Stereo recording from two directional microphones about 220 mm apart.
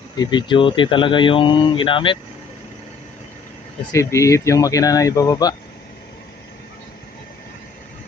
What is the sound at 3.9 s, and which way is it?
Speech, 15° left (ahead or behind).